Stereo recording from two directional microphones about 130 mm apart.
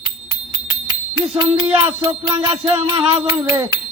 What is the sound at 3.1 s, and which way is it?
Music, 20° right (ahead or behind).